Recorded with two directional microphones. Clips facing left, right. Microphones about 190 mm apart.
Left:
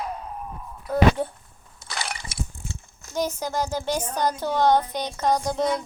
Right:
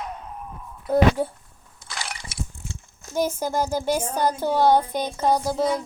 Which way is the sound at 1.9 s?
60° left (ahead or behind).